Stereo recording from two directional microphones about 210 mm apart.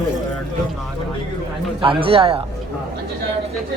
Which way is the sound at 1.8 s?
25° right (ahead or behind).